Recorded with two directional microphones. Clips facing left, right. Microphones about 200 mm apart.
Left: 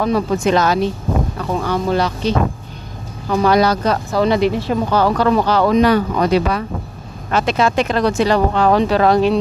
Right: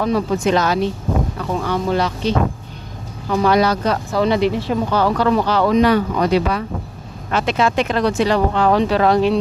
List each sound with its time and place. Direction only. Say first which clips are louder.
0.0 s speech: left 1 dB; 50° left (ahead or behind)